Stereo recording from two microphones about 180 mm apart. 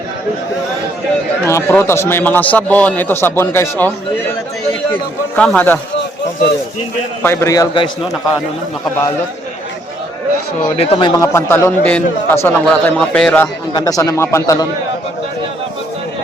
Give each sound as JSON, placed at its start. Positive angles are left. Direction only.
{"t": 1.5, "sound": "a man's voice", "side_deg": 15}
{"t": 5.4, "sound": "a man's voice", "side_deg": 10}
{"t": 7.2, "sound": "a man's voice", "side_deg": 15}
{"t": 10.8, "sound": "speech", "side_deg": 30}
{"t": 11.2, "sound": "a man's voice", "side_deg": 15}
{"t": 13.7, "sound": "a man's voice", "side_deg": 20}